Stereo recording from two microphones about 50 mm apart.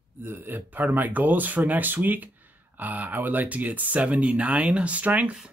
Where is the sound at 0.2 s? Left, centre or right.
Right.